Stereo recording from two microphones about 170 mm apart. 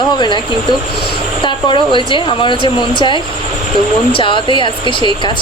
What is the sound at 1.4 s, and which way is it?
Speech, 30° left (ahead or behind).